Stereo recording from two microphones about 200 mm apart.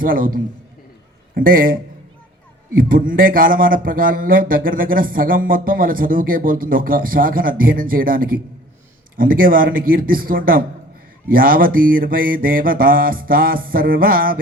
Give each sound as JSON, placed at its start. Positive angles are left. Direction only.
{"t": 0.0, "sound": "speech", "side_deg": -45}